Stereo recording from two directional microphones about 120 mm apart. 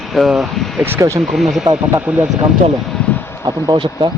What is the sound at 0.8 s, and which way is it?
Speech, 20° right (ahead or behind).